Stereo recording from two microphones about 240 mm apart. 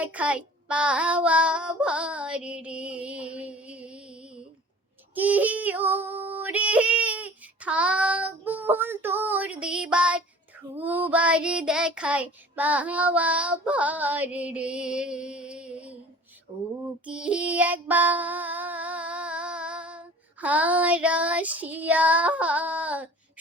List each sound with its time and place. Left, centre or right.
0.0 s child singing: centre
5.1 s female singing: centre
10.8 s child singing: centre
16.5 s a sound: centre
17.1 s child singing: centre